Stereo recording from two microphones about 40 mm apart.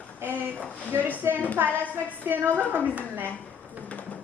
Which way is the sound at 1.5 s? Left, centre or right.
Right.